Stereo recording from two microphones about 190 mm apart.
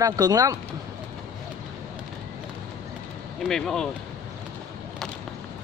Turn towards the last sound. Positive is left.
turn(degrees=5)  # may be behind; listen again after turning